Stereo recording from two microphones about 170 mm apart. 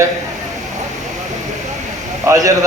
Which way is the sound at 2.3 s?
20° right (ahead or behind).